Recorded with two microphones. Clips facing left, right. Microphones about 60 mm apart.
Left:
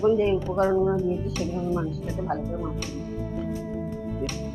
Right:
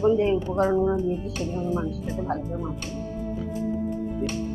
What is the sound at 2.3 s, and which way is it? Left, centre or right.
Speech, centre.